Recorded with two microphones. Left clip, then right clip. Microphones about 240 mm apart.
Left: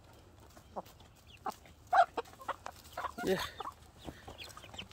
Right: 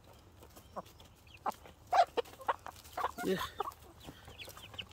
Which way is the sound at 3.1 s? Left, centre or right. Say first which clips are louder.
Left 2 dB; centre.